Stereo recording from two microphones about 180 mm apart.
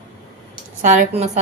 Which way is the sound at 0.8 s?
45° right (ahead or behind).